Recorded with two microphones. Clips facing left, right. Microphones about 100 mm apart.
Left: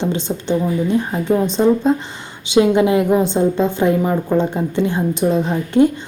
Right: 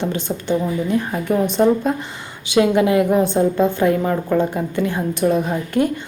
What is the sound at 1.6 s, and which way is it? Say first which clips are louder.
Speech: even; 10° left (ahead or behind).